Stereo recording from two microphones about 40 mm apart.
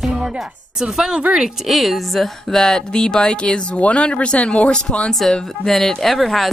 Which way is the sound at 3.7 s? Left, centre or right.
Left.